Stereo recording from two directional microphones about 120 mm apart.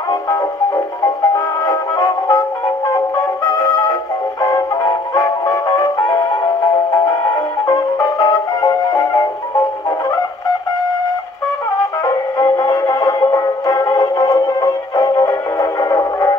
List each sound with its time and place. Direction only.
1.0 s music: 30° left (ahead or behind)
3.5 s music: 30° left (ahead or behind)
7.6 s music: 30° left (ahead or behind)
12.0 s music: 30° left (ahead or behind)